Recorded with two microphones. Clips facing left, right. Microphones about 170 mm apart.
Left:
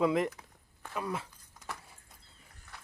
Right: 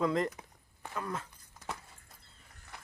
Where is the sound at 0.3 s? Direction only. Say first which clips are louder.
Right 3 dB; 15° right (ahead or behind).